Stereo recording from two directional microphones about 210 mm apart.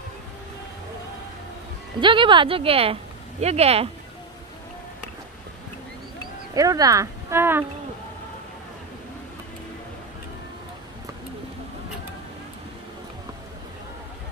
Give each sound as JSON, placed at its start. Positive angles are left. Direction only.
{"t": 2.0, "sound": "speech", "side_deg": -25}
{"t": 6.5, "sound": "speech", "side_deg": -15}